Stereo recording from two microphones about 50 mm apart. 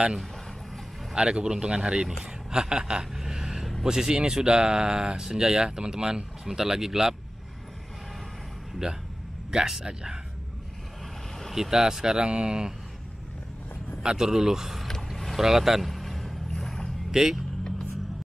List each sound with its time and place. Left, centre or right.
1.1 s speech: centre
2.5 s a sound: centre
3.8 s speech: centre
9.5 s speech: centre
11.5 s speech: centre
14.0 s speech: centre
14.9 s vehicle: centre
15.4 s boat: centre
17.1 s speech: centre